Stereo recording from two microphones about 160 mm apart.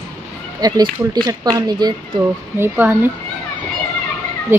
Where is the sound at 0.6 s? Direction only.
25° right (ahead or behind).